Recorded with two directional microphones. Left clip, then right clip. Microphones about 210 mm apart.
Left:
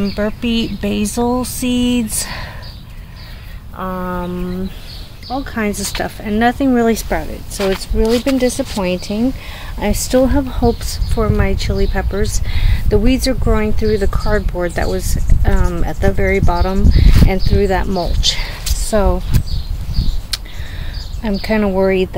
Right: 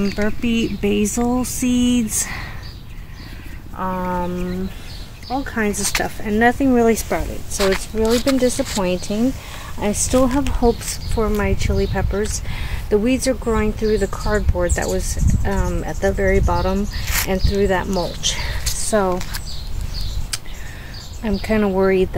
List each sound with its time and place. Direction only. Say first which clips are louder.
0.0 s speech: left 3 dB; 5° left (ahead or behind)
3.7 s speech: even; centre (ahead or behind)
5.3 s speech: left 1 dB; centre (ahead or behind)
7.5 s speech: left 1 dB; 15° right (ahead or behind)
8.0 s speech: left 3 dB; centre (ahead or behind)
20.3 s a sound: left 6 dB; 5° left (ahead or behind)
21.2 s speech: left 3 dB; 5° left (ahead or behind)